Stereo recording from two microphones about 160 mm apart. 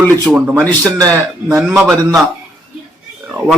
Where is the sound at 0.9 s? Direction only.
20° right (ahead or behind).